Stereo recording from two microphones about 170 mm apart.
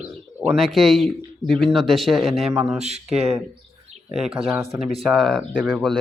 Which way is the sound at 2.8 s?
40° right (ahead or behind).